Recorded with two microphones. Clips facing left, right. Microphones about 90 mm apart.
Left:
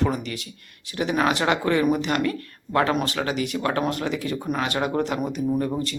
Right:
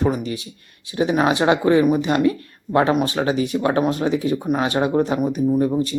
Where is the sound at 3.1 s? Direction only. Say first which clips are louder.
Right 5 dB; 25° right (ahead or behind).